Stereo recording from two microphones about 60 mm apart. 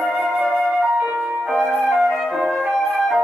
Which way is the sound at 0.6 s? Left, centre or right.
Right.